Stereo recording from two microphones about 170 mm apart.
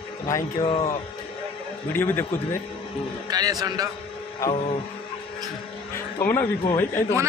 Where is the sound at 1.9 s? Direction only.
15° left (ahead or behind).